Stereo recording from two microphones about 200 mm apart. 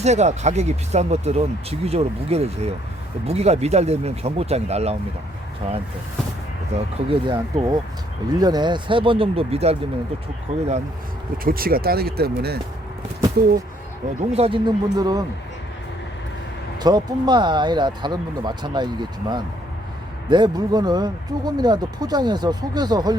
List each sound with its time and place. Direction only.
0.0 s speech: 35° right (ahead or behind)
11.4 s speech: 50° right (ahead or behind)
14.2 s speech: 30° right (ahead or behind)
16.8 s speech: 20° right (ahead or behind)